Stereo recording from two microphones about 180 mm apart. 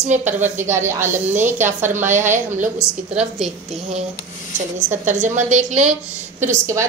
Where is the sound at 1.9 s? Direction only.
15° right (ahead or behind).